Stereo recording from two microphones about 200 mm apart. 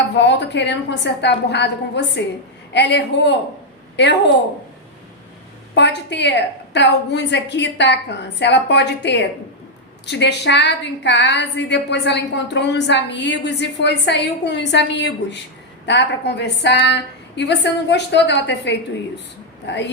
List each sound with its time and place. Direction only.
0.1 s a woman's voice: 60° left (ahead or behind)
5.7 s a woman's voice: 60° left (ahead or behind)